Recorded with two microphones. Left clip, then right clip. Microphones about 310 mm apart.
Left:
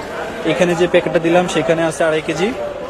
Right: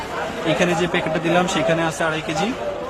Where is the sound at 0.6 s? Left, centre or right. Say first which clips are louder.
Left 9 dB; centre.